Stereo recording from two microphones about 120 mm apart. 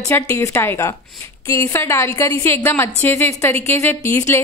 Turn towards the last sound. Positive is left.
turn(degrees=20)  # may be behind; listen again after turning